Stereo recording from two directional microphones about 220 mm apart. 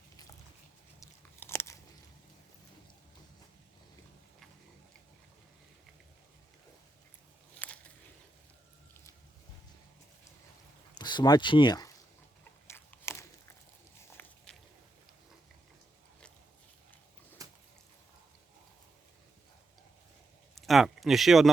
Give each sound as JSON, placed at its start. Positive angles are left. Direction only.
{"t": 0.9, "sound": "biting", "side_deg": 15}
{"t": 10.9, "sound": "speech", "side_deg": 20}
{"t": 12.6, "sound": "biting", "side_deg": 10}
{"t": 14.2, "sound": "walk", "side_deg": 10}
{"t": 17.4, "sound": "a sound", "side_deg": -15}
{"t": 20.6, "sound": "a sound", "side_deg": 0}